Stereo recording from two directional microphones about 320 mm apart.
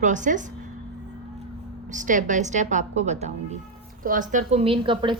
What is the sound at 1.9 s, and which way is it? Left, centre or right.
A woman's voice, right.